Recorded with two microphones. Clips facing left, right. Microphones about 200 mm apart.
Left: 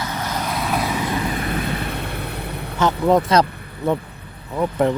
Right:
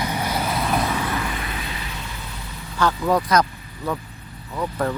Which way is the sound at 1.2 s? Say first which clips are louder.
Left 7 dB; 45° left (ahead or behind).